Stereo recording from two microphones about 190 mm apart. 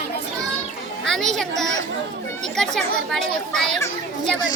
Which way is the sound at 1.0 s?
Centre (ahead or behind).